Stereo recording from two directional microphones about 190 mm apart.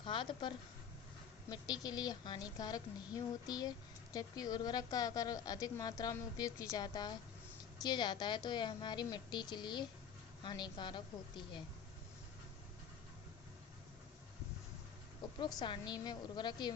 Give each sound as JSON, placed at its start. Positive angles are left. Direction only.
{"t": 0.0, "sound": "a woman's voice", "side_deg": 25}
{"t": 15.4, "sound": "speech", "side_deg": 20}